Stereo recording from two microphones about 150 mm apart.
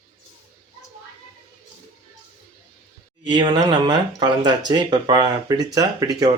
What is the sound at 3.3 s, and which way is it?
Speech, 30° right (ahead or behind).